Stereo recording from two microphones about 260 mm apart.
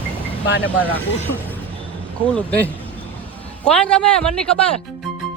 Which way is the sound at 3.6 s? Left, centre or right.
Centre.